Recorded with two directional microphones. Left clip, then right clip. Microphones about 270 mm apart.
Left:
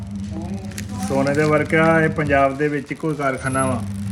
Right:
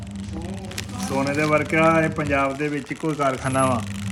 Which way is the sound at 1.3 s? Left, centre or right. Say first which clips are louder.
Left 1 dB; centre.